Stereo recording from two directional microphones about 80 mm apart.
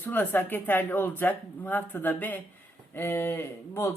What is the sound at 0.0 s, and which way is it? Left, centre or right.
A woman's voice, left.